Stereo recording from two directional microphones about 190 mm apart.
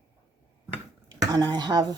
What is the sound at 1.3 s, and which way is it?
Speech, 20° right (ahead or behind).